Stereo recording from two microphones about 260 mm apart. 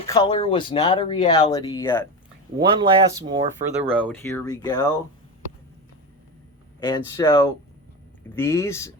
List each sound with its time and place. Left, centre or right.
0.0 s speech: centre
2.6 s speech: centre
3.9 s speech: centre
6.7 s speech: centre